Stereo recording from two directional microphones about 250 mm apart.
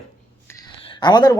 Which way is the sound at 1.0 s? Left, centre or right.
Centre.